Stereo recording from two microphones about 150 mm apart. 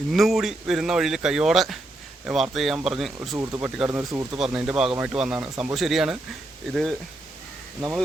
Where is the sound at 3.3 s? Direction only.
20° right (ahead or behind).